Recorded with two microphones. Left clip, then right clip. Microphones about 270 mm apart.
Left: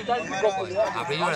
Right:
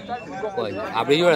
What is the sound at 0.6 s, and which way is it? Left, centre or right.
Speech, right.